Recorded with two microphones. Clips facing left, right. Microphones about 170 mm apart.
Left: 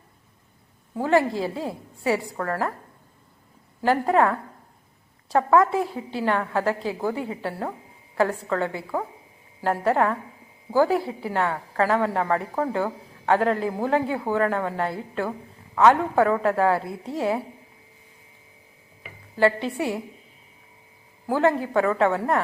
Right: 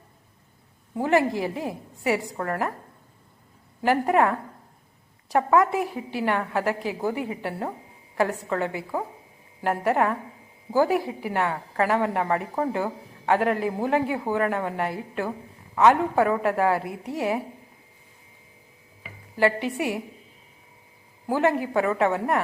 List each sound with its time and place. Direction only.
0.9 s a woman's voice: 15° right (ahead or behind)
3.8 s a woman's voice: 15° right (ahead or behind)
19.4 s a woman's voice: 15° right (ahead or behind)
21.2 s a woman's voice: 15° right (ahead or behind)